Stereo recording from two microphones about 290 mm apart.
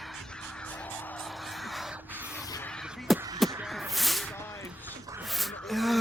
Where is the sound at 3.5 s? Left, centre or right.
Centre.